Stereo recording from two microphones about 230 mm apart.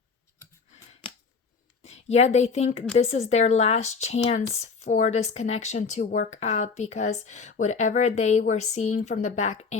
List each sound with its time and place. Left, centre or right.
1.8 s speech: left